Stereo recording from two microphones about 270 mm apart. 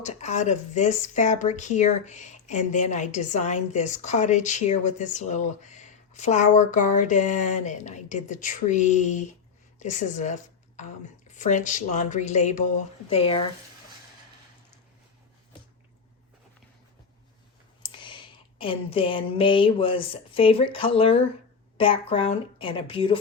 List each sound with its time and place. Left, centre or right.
0.0 s speech: left
17.8 s a sound: centre
21.8 s speech: centre